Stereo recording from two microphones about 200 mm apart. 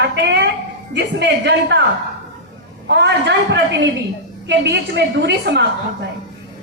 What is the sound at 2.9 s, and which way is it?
Speech, 60° right (ahead or behind).